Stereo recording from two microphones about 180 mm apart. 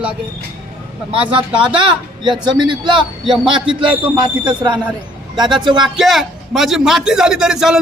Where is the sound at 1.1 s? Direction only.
30° right (ahead or behind).